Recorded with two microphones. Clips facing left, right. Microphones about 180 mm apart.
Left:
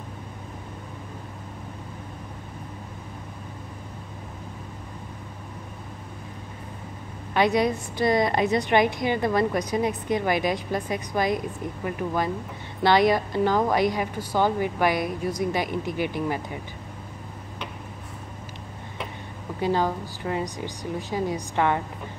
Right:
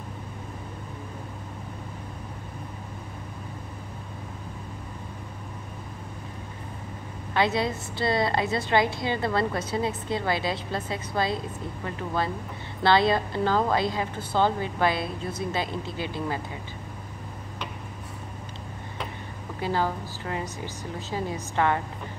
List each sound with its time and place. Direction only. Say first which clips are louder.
7.3 s a woman's voice: left 4 dB; 15° left (ahead or behind)
19.6 s a woman's voice: left 3 dB; 15° left (ahead or behind)